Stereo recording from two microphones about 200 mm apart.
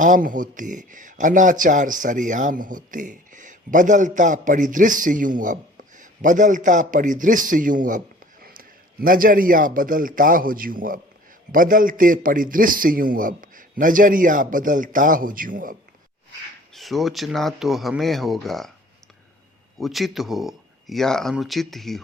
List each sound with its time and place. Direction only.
0.0 s a man's voice: 40° right (ahead or behind)
16.7 s speech: centre (ahead or behind)
19.8 s speech: centre (ahead or behind)